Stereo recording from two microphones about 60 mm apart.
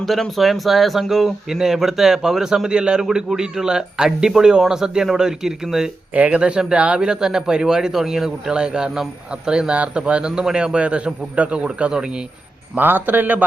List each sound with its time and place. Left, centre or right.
0.0 s speech: centre
6.1 s speech: right
12.7 s a man's voice: right